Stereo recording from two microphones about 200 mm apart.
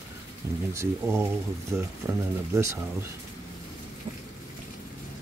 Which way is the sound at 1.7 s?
5° right (ahead or behind).